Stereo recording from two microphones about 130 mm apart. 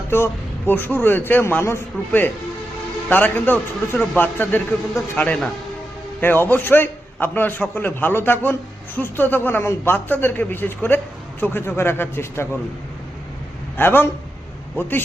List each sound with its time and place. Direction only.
0.1 s a man's voice: 20° left (ahead or behind)
13.7 s a man's voice: 15° left (ahead or behind)